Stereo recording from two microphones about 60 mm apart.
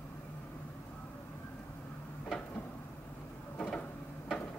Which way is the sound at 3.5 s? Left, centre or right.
Centre.